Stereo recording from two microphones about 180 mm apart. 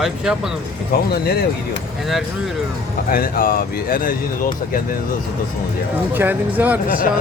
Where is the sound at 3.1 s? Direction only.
55° left (ahead or behind).